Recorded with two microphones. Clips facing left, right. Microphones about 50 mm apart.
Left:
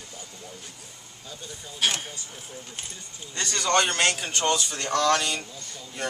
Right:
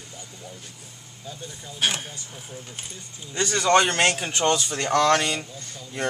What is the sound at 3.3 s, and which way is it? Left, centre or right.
Speech, centre.